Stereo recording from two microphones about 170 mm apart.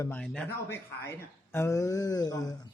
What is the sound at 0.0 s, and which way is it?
A man's voice, 10° left (ahead or behind).